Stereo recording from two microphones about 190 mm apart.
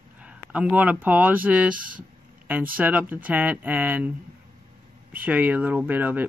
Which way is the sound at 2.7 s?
10° right (ahead or behind).